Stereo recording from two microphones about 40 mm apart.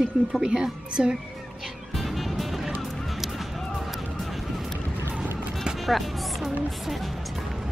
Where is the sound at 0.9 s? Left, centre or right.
Centre.